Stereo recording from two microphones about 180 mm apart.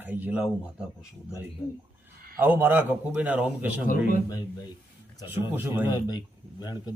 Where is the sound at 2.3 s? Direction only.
10° right (ahead or behind).